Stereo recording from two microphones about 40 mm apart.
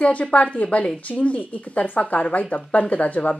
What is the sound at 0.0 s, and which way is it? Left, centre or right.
Speech, left.